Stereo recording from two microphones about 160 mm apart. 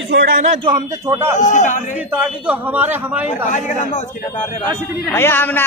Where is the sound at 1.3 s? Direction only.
50° left (ahead or behind).